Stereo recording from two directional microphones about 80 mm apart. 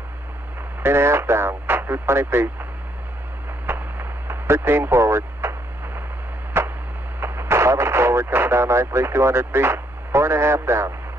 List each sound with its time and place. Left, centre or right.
0.8 s speech: right
3.6 s a sound: right
6.5 s chop: right
7.2 s radio: right